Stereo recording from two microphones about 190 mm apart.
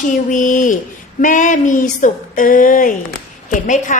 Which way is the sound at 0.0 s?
40° left (ahead or behind).